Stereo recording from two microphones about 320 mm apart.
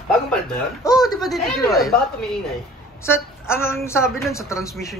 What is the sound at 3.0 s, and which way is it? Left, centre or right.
A woman's voice, centre.